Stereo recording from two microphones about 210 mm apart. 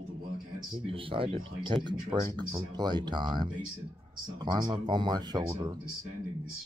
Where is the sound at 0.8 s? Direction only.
25° right (ahead or behind).